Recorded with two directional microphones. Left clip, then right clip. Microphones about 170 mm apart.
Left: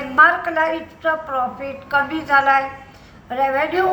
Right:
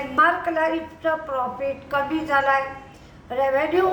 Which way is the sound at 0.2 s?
10° right (ahead or behind).